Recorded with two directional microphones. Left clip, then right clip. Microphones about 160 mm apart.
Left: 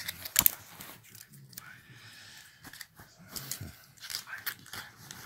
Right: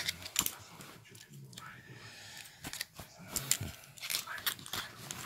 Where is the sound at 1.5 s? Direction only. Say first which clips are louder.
Right 1 dB; 5° left (ahead or behind).